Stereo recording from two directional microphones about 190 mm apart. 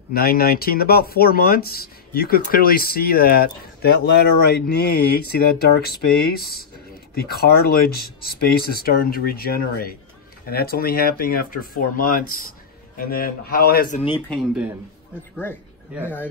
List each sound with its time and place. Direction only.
0.1 s speech: 55° left (ahead or behind)
14.3 s speech: 5° right (ahead or behind)
15.9 s speech: 5° right (ahead or behind)